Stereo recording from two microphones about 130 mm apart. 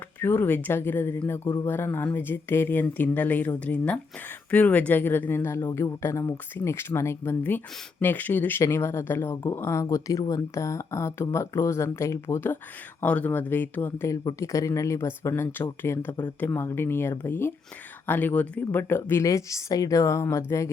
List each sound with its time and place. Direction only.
0.2 s speech: 15° left (ahead or behind)
9.3 s speech: 30° left (ahead or behind)